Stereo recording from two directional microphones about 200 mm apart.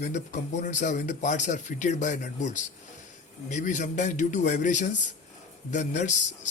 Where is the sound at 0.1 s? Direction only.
35° left (ahead or behind).